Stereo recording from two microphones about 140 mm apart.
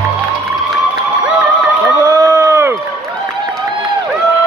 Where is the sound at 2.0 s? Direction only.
25° right (ahead or behind).